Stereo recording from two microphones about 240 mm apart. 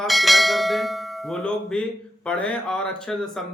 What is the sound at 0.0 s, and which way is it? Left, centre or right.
Bell, centre.